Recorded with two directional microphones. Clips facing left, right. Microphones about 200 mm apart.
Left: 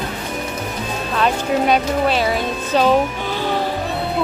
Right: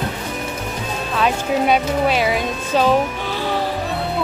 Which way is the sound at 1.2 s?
5° right (ahead or behind).